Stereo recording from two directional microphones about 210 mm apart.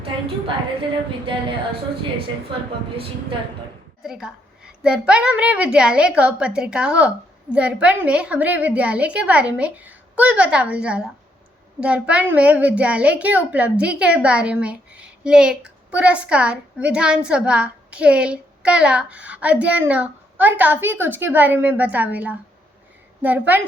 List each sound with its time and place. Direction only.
0.0 s a woman's voice: 25° right (ahead or behind)
4.0 s a woman's voice: 5° right (ahead or behind)